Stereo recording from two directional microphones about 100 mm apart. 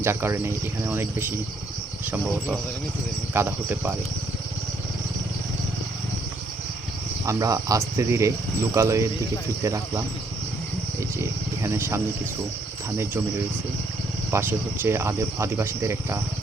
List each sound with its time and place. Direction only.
0.0 s speech: 25° right (ahead or behind)
7.3 s speech: 35° right (ahead or behind)
11.2 s speech: 30° right (ahead or behind)
14.3 s speech: 20° right (ahead or behind)